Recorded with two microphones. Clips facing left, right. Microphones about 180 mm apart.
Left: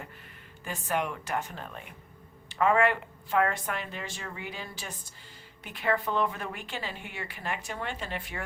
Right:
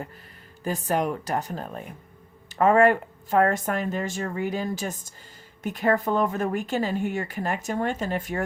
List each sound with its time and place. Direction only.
0.6 s speech: 40° right (ahead or behind)